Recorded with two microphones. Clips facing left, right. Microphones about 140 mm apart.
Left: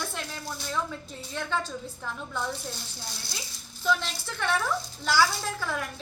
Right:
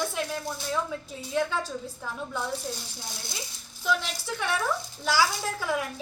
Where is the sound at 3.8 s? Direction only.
10° right (ahead or behind).